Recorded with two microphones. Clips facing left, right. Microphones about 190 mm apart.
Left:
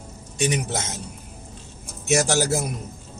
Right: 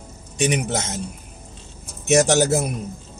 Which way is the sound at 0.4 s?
20° right (ahead or behind).